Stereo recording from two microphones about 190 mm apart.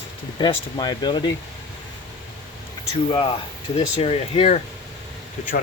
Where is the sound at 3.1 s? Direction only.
25° left (ahead or behind).